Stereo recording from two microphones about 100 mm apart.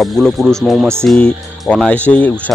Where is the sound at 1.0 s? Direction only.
10° left (ahead or behind).